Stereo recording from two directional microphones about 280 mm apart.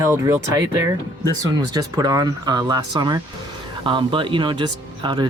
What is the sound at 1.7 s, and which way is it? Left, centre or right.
Speech, centre.